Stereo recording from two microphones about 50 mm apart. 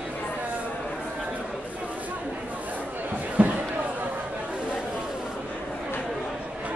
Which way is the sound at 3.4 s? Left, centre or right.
Right.